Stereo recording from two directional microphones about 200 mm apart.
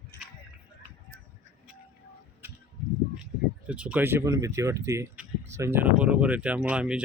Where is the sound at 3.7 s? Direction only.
5° right (ahead or behind).